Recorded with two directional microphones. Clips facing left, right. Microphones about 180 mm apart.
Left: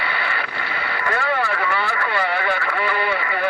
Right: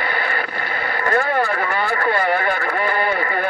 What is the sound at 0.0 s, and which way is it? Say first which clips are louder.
Vehicle: right 3 dB; 45° right (ahead or behind).